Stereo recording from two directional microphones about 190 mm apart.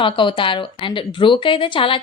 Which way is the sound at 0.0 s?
25° left (ahead or behind).